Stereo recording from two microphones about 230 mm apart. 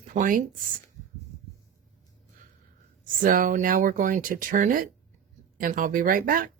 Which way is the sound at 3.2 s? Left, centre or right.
Right.